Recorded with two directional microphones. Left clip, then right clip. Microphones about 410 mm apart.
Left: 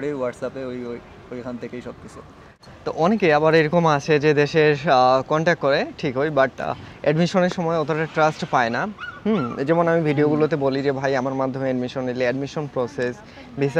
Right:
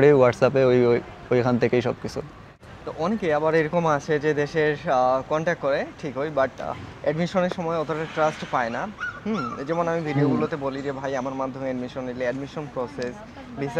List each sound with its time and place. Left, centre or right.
0.0 s speech: right
2.9 s speech: left